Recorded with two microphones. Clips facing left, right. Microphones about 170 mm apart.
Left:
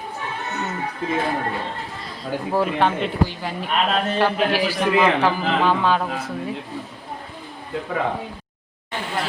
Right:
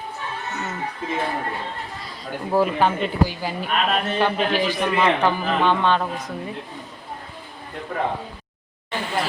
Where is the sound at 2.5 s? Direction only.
Centre (ahead or behind).